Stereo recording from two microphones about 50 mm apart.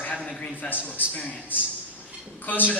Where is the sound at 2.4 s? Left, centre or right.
Left.